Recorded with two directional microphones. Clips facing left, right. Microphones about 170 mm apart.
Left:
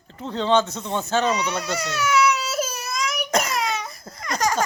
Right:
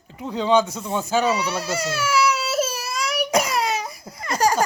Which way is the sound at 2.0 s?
30° right (ahead or behind).